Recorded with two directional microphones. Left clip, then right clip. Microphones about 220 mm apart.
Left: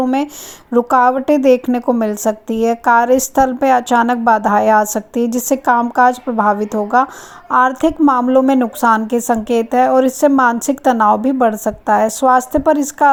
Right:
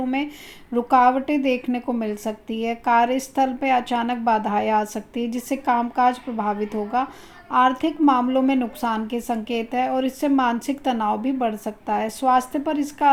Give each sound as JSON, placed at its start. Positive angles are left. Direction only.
{"t": 0.0, "sound": "a woman's voice", "side_deg": 40}